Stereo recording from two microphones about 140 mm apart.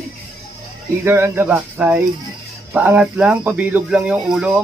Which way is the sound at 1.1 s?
15° right (ahead or behind).